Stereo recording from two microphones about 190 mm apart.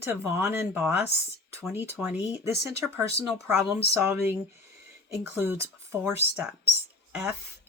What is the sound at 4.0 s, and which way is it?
Speech, 10° right (ahead or behind).